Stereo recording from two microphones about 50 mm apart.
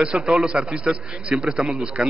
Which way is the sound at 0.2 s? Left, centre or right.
Centre.